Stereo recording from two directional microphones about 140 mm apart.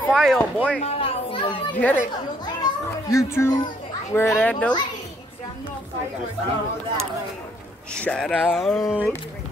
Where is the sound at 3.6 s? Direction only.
30° left (ahead or behind).